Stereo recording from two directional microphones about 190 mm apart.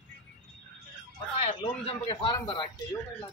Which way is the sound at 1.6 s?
25° left (ahead or behind).